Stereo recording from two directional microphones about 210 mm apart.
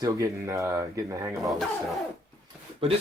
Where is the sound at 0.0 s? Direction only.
15° right (ahead or behind).